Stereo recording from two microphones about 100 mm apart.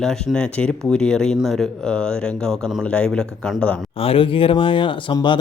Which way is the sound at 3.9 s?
70° left (ahead or behind).